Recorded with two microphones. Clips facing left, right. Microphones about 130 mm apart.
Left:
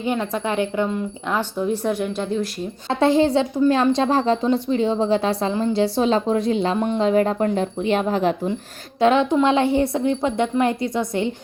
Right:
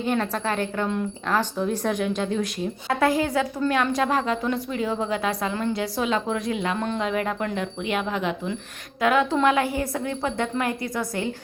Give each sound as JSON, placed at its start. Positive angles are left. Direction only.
{"t": 0.0, "sound": "a woman's voice", "side_deg": 10}
{"t": 2.9, "sound": "speech", "side_deg": 25}
{"t": 6.7, "sound": "a woman's voice", "side_deg": 15}
{"t": 7.0, "sound": "speech", "side_deg": 30}
{"t": 9.0, "sound": "speech", "side_deg": 25}